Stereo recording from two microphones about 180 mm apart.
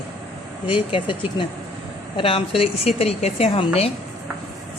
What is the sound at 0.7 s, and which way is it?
A woman's voice, 25° left (ahead or behind).